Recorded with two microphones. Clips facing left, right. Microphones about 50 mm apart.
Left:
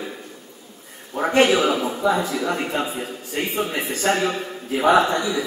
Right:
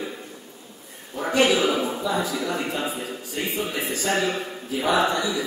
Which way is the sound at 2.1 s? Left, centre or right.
Left.